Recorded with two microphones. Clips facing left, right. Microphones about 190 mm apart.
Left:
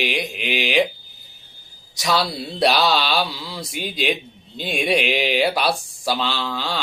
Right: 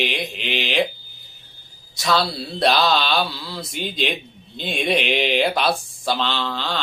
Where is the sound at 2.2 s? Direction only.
5° left (ahead or behind).